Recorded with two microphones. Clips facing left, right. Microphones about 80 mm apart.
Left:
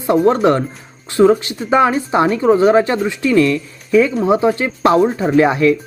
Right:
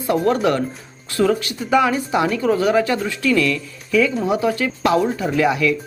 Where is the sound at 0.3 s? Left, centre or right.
Left.